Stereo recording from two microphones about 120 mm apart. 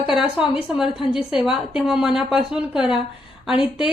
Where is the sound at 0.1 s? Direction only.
5° right (ahead or behind).